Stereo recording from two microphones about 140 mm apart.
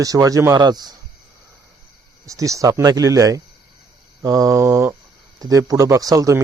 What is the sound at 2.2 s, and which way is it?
Speech, 25° right (ahead or behind).